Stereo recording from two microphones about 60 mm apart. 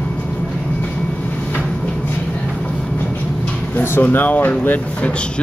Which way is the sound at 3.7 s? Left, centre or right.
Left.